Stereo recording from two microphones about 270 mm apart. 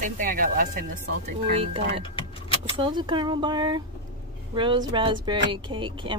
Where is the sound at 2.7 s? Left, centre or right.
Centre.